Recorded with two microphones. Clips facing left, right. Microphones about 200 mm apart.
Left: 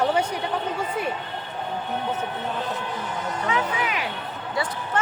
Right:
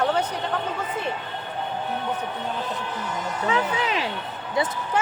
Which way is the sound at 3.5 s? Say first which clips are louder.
Right 2 dB; 30° right (ahead or behind).